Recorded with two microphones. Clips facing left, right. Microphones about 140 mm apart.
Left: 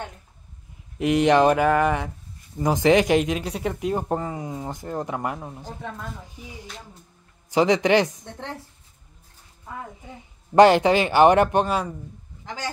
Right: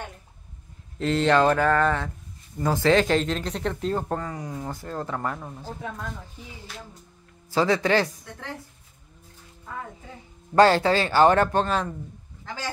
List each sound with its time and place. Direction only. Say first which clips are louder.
0.9 s speech: left 3 dB; 15° left (ahead or behind)
5.8 s speech: even; 5° right (ahead or behind)
6.4 s speech: left 1 dB; 15° left (ahead or behind)
10.5 s speech: left 3 dB; 20° left (ahead or behind)